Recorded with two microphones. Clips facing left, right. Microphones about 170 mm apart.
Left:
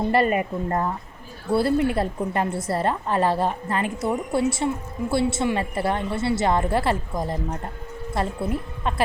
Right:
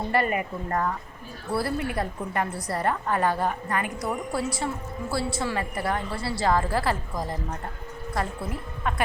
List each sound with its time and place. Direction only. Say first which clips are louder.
0.1 s a woman's voice: left 3 dB; 25° left (ahead or behind)